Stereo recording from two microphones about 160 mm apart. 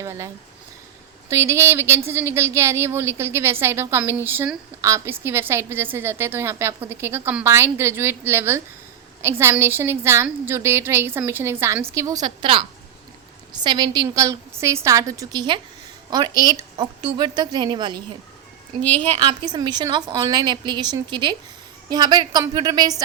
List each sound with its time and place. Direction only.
0.0 s a sound: 20° right (ahead or behind)
1.3 s a woman's voice: 15° right (ahead or behind)
18.8 s a woman's voice: 10° left (ahead or behind)
19.0 s a woman's voice: 35° right (ahead or behind)